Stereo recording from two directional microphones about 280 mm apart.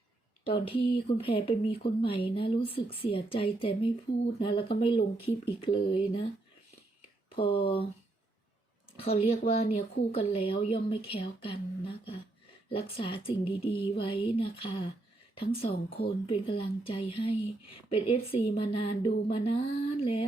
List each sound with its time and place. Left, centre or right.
0.4 s speech: centre
7.3 s a sound: centre
7.6 s speech: centre
9.0 s speech: centre
12.6 s speech: centre